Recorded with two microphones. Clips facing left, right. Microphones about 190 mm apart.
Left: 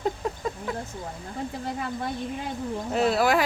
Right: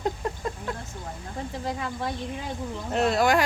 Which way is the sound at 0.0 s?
Centre (ahead or behind).